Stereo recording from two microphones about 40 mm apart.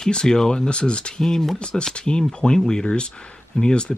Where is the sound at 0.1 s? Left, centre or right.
Centre.